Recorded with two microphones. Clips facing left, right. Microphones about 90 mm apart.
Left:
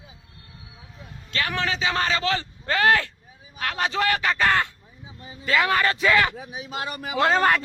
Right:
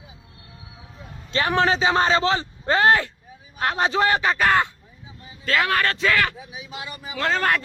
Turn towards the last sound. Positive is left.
turn(degrees=5)  # may be behind; listen again after turning